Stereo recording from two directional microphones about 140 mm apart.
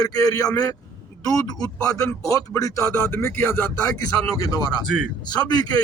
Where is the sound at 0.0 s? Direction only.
25° left (ahead or behind).